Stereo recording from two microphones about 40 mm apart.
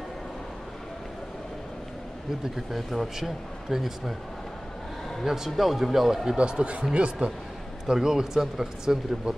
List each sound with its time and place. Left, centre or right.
2.5 s speech: centre
5.2 s speech: centre
6.3 s speech: right
7.8 s speech: centre